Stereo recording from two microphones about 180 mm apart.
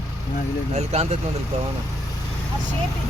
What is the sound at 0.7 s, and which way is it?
Speech, 40° right (ahead or behind).